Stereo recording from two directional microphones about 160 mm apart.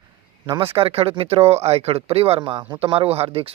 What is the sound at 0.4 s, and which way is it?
Speech, 30° right (ahead or behind).